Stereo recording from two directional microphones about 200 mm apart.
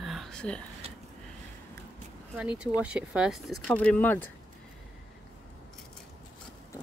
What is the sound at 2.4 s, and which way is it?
Speech, 5° right (ahead or behind).